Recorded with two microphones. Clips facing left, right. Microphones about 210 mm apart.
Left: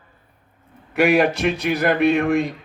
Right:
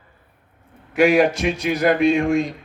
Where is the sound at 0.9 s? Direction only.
60° left (ahead or behind).